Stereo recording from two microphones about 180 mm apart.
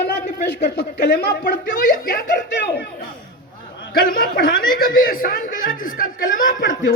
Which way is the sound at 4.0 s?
50° left (ahead or behind).